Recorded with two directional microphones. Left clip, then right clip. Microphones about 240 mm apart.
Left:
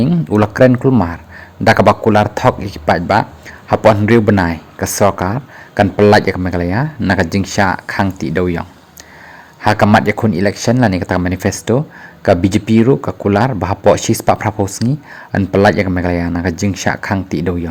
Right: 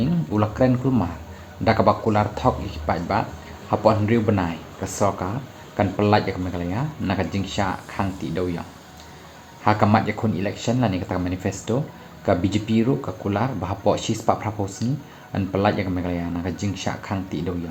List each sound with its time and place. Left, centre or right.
0.0 s speech: left
9.8 s speech: left